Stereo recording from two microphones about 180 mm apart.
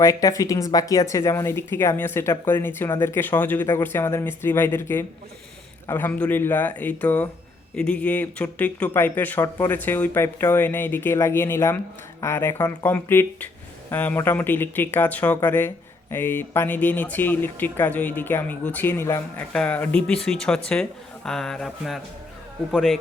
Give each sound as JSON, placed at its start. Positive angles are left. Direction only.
{"t": 0.0, "sound": "speech", "side_deg": 20}
{"t": 20.1, "sound": "music", "side_deg": 5}